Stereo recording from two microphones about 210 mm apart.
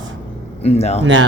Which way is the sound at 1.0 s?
65° right (ahead or behind).